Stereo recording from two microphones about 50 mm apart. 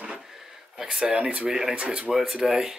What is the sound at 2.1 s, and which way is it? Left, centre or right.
Speech, centre.